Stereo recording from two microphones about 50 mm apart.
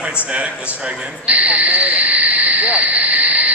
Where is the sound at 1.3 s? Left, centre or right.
Right.